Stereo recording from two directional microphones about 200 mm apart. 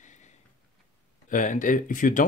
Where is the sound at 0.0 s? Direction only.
35° left (ahead or behind).